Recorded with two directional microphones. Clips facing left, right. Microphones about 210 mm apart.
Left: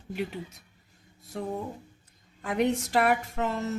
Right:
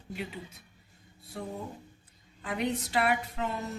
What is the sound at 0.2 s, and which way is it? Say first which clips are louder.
Speech: left 7 dB; 45° left (ahead or behind).